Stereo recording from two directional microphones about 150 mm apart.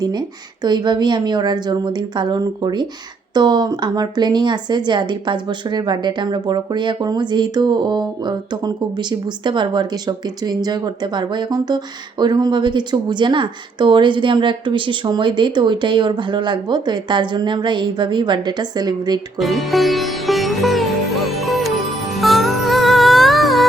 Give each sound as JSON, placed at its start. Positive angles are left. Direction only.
{"t": 0.0, "sound": "speech", "side_deg": -30}
{"t": 19.4, "sound": "sitar", "side_deg": 0}
{"t": 22.1, "sound": "music", "side_deg": 0}